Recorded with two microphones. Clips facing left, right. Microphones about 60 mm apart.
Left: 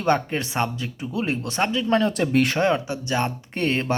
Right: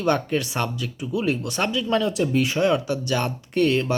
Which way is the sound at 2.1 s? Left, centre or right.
Left.